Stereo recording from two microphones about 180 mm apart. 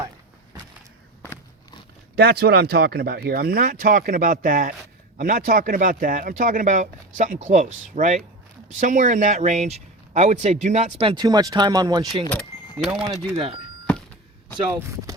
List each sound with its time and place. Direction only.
2.1 s speech: 60° right (ahead or behind); by 12.0 s 20° right (ahead or behind)
12.7 s speech: 5° right (ahead or behind)
13.3 s speech: 35° right (ahead or behind)